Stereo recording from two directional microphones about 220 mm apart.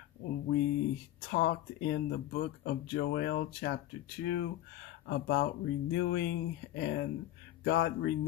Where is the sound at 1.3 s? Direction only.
45° left (ahead or behind).